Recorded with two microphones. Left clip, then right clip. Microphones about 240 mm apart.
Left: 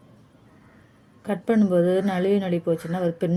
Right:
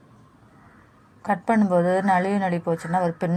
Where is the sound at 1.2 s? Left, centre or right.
Right.